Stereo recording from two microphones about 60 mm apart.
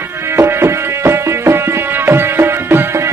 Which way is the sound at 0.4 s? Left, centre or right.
Right.